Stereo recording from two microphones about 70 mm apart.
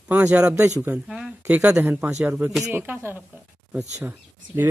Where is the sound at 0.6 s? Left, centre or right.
Right.